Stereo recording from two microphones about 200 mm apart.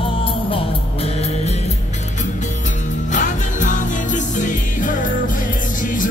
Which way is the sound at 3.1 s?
40° left (ahead or behind).